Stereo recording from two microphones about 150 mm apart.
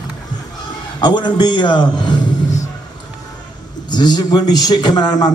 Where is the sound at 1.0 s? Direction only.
30° left (ahead or behind).